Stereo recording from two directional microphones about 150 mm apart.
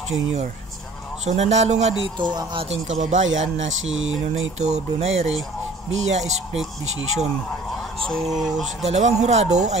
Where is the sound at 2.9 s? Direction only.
55° right (ahead or behind).